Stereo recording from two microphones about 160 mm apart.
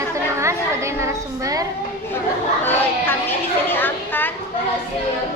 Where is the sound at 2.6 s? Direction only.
15° left (ahead or behind).